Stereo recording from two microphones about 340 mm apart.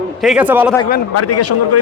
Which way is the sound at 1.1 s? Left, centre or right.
Left.